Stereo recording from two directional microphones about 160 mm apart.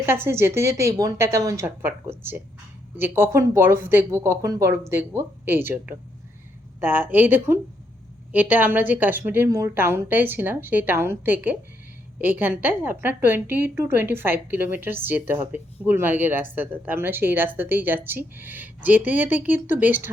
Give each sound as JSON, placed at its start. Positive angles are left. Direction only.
{"t": 0.0, "sound": "a woman's voice", "side_deg": -15}